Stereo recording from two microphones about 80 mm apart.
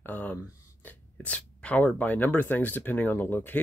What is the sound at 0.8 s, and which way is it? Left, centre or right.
Speech, centre.